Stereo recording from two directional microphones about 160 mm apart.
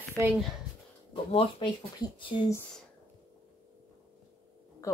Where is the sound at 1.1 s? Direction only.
35° left (ahead or behind).